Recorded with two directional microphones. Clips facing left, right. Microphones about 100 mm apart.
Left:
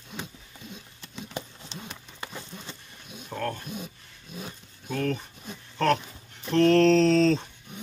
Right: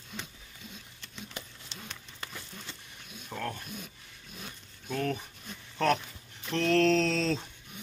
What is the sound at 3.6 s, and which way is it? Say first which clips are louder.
Speech: left 6 dB; 25° left (ahead or behind).